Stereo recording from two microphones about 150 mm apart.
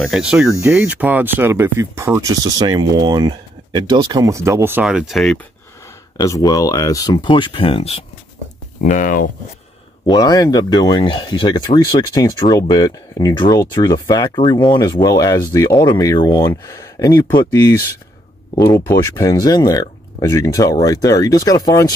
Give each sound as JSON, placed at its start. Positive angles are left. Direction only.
{"t": 0.0, "sound": "speech", "side_deg": -5}
{"t": 6.2, "sound": "speech", "side_deg": 20}
{"t": 8.8, "sound": "speech", "side_deg": 60}
{"t": 10.0, "sound": "speech", "side_deg": 25}